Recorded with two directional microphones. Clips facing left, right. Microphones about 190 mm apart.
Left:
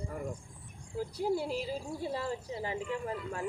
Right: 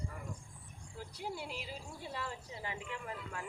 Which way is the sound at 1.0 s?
40° left (ahead or behind).